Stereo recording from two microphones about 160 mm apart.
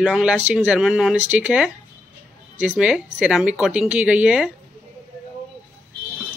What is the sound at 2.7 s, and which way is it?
A woman's voice, 5° right (ahead or behind).